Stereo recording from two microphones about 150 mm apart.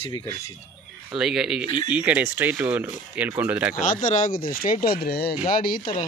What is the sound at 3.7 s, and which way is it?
Speech, 60° left (ahead or behind).